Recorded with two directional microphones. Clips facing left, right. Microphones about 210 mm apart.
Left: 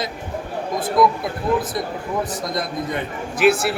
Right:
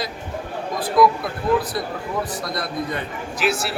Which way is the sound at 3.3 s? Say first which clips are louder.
Left 7 dB; 55° left (ahead or behind).